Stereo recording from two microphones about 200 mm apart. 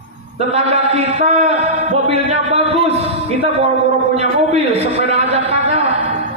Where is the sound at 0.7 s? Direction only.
30° right (ahead or behind).